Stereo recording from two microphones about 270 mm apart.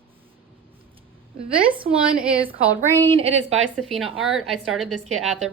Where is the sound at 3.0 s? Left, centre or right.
Right.